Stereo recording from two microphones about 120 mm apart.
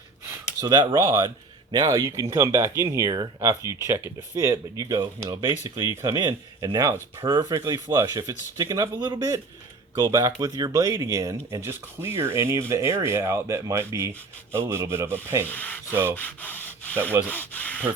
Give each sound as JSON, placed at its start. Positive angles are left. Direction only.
{"t": 0.6, "sound": "speech", "side_deg": -35}
{"t": 3.8, "sound": "speech", "side_deg": -20}
{"t": 15.4, "sound": "speech", "side_deg": 15}
{"t": 15.9, "sound": "speech", "side_deg": -20}
{"t": 16.1, "sound": "sanding", "side_deg": 15}
{"t": 17.2, "sound": "speech", "side_deg": 15}